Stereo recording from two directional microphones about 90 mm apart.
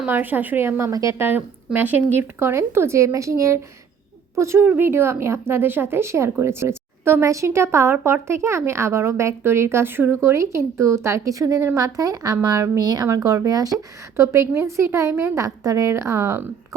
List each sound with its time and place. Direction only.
0.1 s speech: 20° right (ahead or behind); by 1.1 s 35° right (ahead or behind)
1.2 s a woman's voice: 20° right (ahead or behind)
12.8 s a woman's voice: 50° right (ahead or behind)
14.2 s a woman's voice: 30° right (ahead or behind)